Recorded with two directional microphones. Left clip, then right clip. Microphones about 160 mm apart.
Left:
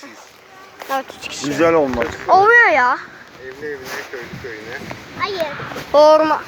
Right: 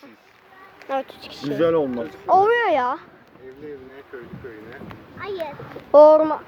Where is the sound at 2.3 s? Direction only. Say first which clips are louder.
Left 6 dB; 20° right (ahead or behind).